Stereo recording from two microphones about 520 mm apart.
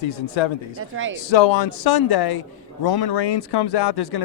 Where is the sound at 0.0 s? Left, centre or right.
Left.